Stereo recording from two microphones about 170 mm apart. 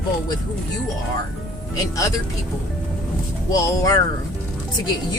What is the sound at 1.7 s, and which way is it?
Speech, 20° left (ahead or behind).